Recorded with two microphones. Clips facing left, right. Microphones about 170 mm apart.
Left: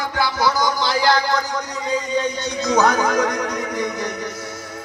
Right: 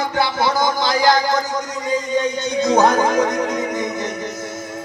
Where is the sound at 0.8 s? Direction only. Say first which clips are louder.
Right 2 dB; 45° right (ahead or behind).